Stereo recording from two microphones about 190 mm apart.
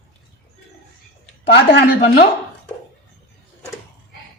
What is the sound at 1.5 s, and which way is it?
Speech, 65° left (ahead or behind).